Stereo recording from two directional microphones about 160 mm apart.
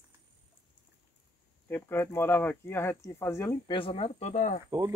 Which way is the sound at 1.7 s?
15° left (ahead or behind).